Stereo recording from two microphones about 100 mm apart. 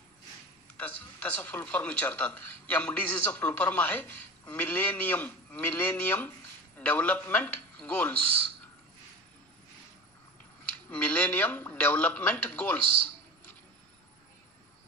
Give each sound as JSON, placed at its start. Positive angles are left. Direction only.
{"t": 0.7, "sound": "speech", "side_deg": 15}
{"t": 10.9, "sound": "speech", "side_deg": 15}